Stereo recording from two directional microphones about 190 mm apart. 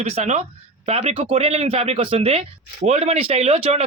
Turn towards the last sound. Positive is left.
turn(degrees=-35)  # may be behind; listen again after turning